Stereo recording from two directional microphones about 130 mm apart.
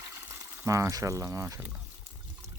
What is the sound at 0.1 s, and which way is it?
Speech, 20° right (ahead or behind).